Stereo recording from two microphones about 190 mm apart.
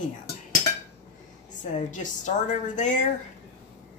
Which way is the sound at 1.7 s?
40° left (ahead or behind).